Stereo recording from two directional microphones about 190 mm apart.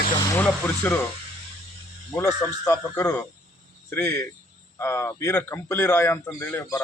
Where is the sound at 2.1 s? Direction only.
15° left (ahead or behind).